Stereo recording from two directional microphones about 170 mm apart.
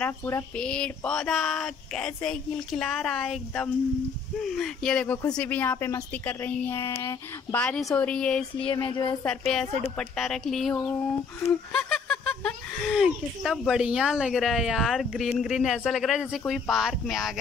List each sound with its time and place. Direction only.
0.0 s speech: 15° left (ahead or behind)
0.6 s speech: 5° left (ahead or behind)
7.6 s speech: 5° left (ahead or behind)
8.5 s a sound: 30° left (ahead or behind)
9.9 s speech: centre (ahead or behind)